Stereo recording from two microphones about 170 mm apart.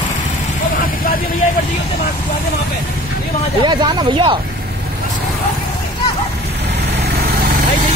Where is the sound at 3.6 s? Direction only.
30° right (ahead or behind).